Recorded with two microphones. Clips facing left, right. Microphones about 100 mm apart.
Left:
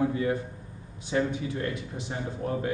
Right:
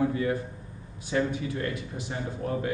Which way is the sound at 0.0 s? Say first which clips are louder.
Even; 20° left (ahead or behind).